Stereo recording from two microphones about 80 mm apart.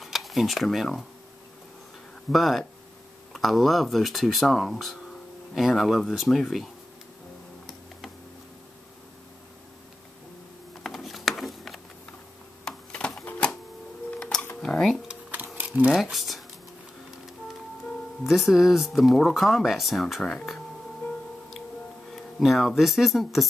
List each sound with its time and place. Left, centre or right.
0.0 s speech: centre
2.3 s speech: centre
10.8 s a sound: centre
14.6 s dishes: centre
15.3 s a sound: right
15.9 s speech: centre
18.2 s speech: centre
22.1 s speech: centre